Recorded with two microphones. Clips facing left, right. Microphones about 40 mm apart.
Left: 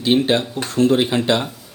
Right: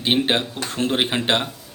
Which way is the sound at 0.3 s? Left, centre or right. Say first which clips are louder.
Left 3 dB; right.